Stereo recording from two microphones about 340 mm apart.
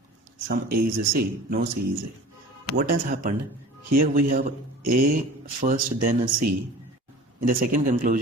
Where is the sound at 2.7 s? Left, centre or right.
Right.